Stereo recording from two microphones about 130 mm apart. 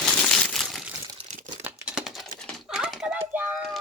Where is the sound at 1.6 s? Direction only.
10° right (ahead or behind).